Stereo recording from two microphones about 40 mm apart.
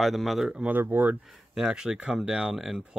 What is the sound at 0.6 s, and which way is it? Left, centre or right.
Speech, right.